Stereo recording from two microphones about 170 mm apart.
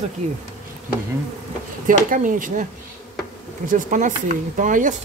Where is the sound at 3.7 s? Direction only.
50° right (ahead or behind).